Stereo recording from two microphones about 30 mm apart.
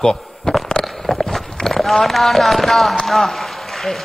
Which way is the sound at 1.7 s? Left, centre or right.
Centre.